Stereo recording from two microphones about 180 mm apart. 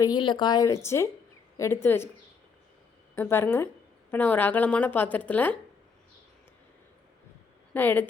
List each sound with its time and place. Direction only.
0.0 s speech: 25° left (ahead or behind)
3.2 s speech: 10° left (ahead or behind)
7.7 s speech: 10° left (ahead or behind)